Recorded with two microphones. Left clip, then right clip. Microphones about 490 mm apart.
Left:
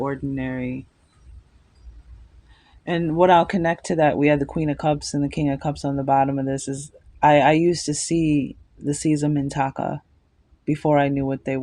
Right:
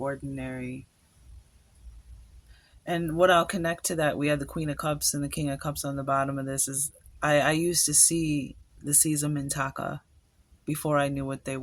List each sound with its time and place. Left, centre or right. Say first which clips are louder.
0.0 s speech: left 6 dB; right
2.8 s speech: left 5 dB; right